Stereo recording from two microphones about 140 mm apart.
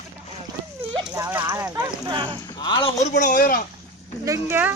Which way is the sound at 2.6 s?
35° left (ahead or behind).